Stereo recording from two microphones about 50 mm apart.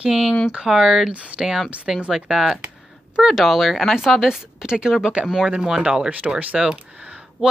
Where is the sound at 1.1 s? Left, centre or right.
Right.